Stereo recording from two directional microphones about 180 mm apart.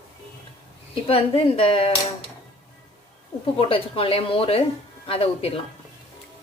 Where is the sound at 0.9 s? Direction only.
30° left (ahead or behind).